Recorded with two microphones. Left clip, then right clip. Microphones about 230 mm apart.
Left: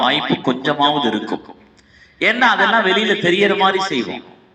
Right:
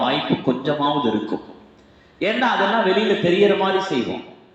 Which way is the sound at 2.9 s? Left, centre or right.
Left.